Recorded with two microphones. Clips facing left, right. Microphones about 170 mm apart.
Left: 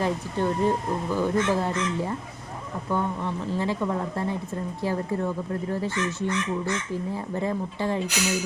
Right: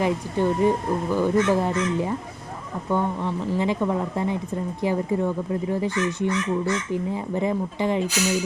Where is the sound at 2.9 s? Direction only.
20° right (ahead or behind).